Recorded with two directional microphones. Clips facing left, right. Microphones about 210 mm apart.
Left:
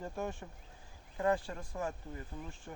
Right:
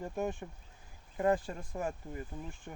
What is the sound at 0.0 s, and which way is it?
Speech, 15° right (ahead or behind).